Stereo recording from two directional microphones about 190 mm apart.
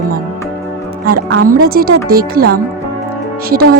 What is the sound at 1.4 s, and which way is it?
Speech, 50° right (ahead or behind).